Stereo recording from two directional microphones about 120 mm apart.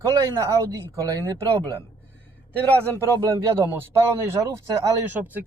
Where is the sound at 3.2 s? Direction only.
25° right (ahead or behind).